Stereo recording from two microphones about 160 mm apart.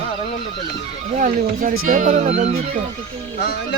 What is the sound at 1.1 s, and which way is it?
Speech, 55° right (ahead or behind).